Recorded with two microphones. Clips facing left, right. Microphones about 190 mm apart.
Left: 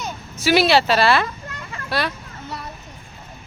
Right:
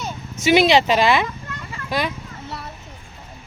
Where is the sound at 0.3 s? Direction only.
20° right (ahead or behind).